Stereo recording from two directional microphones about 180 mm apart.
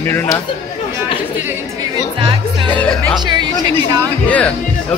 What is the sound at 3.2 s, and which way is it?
Speech, 25° right (ahead or behind).